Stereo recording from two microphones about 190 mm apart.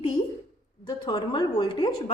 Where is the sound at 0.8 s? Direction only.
20° left (ahead or behind).